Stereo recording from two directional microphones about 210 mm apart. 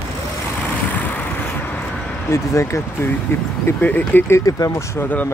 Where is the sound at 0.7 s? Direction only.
5° left (ahead or behind).